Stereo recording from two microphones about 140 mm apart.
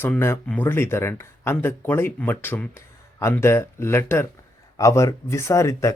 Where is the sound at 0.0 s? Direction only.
15° left (ahead or behind).